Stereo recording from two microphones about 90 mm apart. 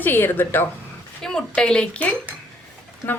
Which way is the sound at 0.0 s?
20° left (ahead or behind).